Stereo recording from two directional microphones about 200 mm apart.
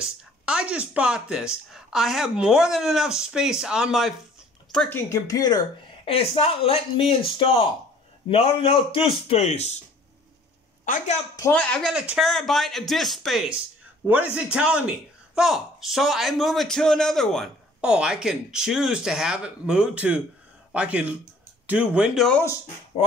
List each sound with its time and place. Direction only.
0.0 s speech: 5° right (ahead or behind)
4.7 s speech: 10° left (ahead or behind)
6.0 s speech: 30° left (ahead or behind)
10.9 s a woman's voice: 40° left (ahead or behind)
11.3 s speech: 15° left (ahead or behind)
11.7 s speech: centre (ahead or behind)